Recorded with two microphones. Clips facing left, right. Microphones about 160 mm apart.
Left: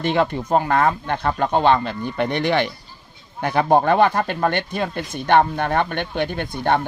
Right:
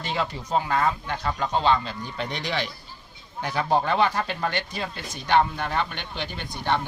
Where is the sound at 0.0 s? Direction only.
55° left (ahead or behind).